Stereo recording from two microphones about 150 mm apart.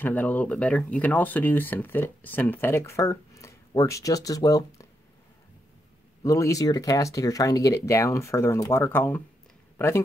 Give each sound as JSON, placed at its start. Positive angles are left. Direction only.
{"t": 0.0, "sound": "speech", "side_deg": 10}
{"t": 6.2, "sound": "speech", "side_deg": 20}